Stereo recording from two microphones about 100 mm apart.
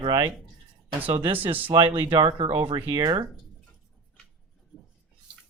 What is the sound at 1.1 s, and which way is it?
Speech, 60° right (ahead or behind).